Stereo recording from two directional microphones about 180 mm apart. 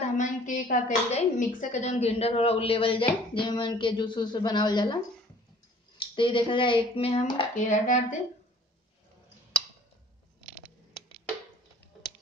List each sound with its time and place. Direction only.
0.0 s a woman's voice: 45° left (ahead or behind); by 4.9 s 25° left (ahead or behind)
5.9 s speech: 30° left (ahead or behind)
7.5 s speech: 45° left (ahead or behind)